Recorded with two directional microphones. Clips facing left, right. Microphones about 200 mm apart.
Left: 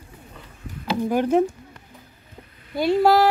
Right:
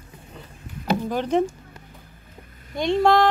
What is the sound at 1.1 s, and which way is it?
Speech, 10° left (ahead or behind).